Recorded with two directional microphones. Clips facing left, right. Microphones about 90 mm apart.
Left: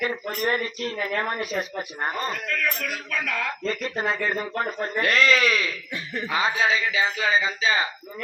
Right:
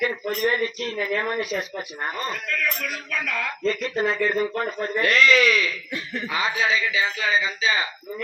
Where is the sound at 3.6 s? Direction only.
35° left (ahead or behind).